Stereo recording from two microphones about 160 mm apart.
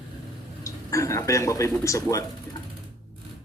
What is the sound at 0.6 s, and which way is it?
Speech, 20° left (ahead or behind).